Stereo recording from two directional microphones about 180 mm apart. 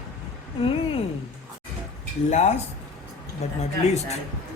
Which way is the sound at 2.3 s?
40° left (ahead or behind).